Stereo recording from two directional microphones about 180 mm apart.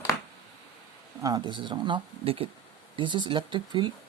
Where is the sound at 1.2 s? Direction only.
25° right (ahead or behind).